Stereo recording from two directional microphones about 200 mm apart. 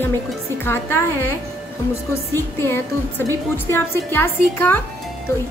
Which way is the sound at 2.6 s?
10° left (ahead or behind).